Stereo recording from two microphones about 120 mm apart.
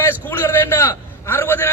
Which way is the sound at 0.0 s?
20° left (ahead or behind).